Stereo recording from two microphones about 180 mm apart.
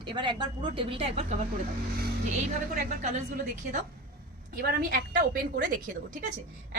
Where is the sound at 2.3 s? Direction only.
45° right (ahead or behind).